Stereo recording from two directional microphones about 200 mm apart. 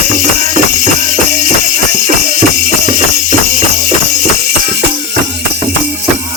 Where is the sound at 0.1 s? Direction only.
40° right (ahead or behind).